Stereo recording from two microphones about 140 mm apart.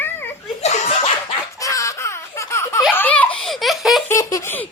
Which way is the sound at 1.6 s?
25° left (ahead or behind).